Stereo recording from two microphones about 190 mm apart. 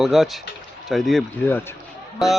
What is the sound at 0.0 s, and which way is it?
A man's voice, centre (ahead or behind).